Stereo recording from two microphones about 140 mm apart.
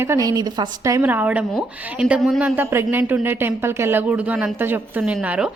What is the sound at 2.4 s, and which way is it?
A woman's voice, 15° right (ahead or behind).